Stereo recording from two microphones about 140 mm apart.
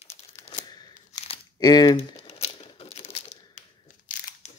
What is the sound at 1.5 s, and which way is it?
Speech, 30° left (ahead or behind).